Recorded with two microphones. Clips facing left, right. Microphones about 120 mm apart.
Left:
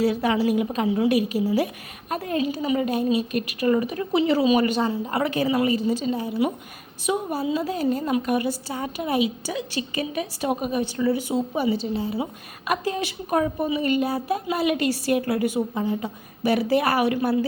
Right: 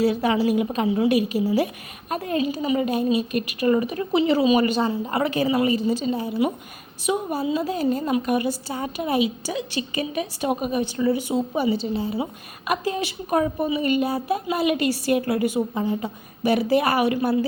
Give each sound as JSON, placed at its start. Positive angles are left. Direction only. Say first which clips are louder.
{"t": 0.0, "sound": "a woman's voice", "louder": "right 1 dB", "side_deg": -25}
{"t": 5.5, "sound": "a woman's voice", "louder": "right 1 dB", "side_deg": -15}
{"t": 5.7, "sound": "a woman's voice", "louder": "right 1 dB", "side_deg": -25}
{"t": 7.1, "sound": "a woman's voice", "louder": "right 1 dB", "side_deg": -15}
{"t": 12.2, "sound": "a woman's voice", "louder": "right 1 dB", "side_deg": -10}